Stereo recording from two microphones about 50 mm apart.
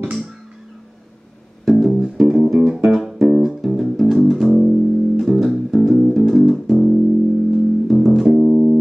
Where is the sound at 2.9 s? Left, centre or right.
Centre.